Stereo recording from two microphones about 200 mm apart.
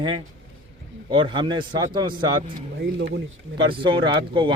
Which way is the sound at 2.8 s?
60° right (ahead or behind).